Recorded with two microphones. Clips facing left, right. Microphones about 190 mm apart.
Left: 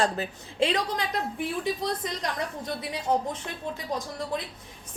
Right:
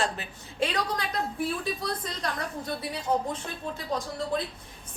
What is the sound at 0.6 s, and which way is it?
A woman's voice, 25° left (ahead or behind).